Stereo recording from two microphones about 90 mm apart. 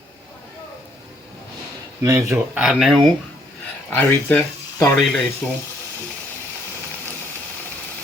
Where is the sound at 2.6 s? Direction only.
5° right (ahead or behind).